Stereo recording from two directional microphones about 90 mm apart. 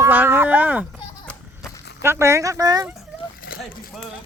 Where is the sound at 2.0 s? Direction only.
30° right (ahead or behind).